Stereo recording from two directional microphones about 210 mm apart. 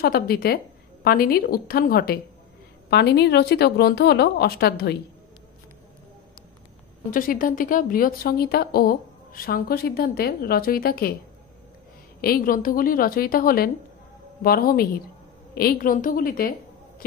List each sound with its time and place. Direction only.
0.0 s a woman's voice: 45° left (ahead or behind)
7.1 s a woman's voice: 40° left (ahead or behind)
12.2 s a woman's voice: 45° left (ahead or behind)